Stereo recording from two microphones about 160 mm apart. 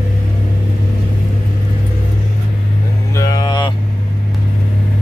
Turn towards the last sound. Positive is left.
turn(degrees=25)  # may be behind; listen again after turning